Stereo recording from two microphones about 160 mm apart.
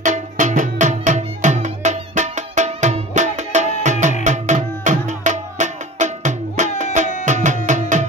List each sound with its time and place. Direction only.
0.0 s music: 50° right (ahead or behind)